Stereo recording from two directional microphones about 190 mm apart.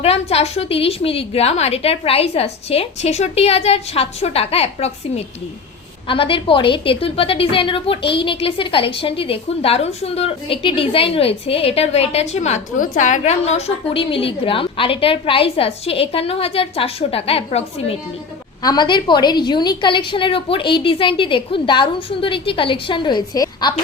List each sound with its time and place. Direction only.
0.0 s a woman's voice: 35° left (ahead or behind)
18.6 s a woman's voice: 20° left (ahead or behind)